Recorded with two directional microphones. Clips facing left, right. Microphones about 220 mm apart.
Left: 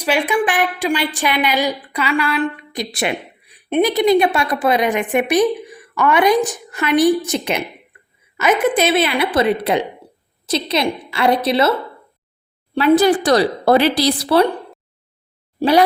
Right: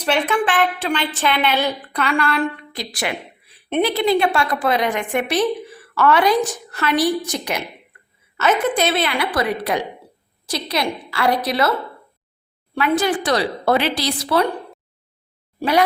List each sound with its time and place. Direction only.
0.0 s a woman's voice: 10° left (ahead or behind)
2.7 s a woman's voice: 20° left (ahead or behind)
12.7 s speech: 35° left (ahead or behind)